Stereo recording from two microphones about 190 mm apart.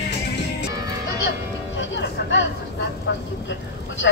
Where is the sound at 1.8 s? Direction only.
75° left (ahead or behind).